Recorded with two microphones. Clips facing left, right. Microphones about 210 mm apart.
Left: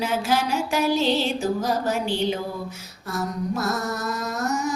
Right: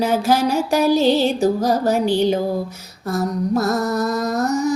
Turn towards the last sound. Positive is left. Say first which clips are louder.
# right 7 dB
turn(degrees=-35)  # may be behind; listen again after turning